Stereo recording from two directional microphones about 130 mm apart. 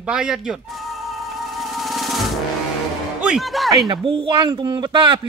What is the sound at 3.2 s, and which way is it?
Speech, 5° right (ahead or behind).